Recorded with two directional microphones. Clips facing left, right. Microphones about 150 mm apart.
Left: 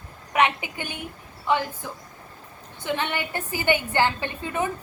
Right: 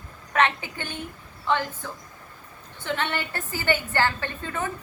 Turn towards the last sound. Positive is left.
turn(degrees=15)  # may be behind; listen again after turning